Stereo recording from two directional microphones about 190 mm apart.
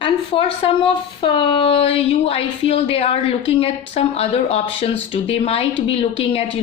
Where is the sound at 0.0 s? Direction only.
30° left (ahead or behind).